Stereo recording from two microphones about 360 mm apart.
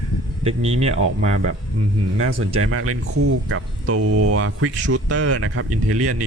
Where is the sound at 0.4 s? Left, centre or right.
Centre.